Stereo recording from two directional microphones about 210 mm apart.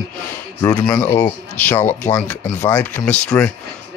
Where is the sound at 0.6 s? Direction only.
15° left (ahead or behind).